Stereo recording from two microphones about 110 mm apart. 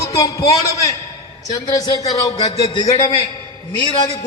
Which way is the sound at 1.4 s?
35° left (ahead or behind).